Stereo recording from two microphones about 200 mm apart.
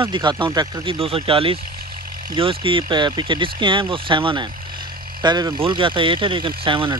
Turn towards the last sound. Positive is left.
turn(degrees=-25)  # may be behind; listen again after turning